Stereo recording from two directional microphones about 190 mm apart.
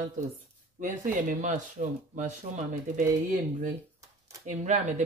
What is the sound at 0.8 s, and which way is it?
Speech, 40° right (ahead or behind).